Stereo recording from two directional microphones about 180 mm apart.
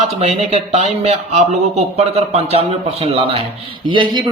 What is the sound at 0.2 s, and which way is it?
Speech, 35° right (ahead or behind).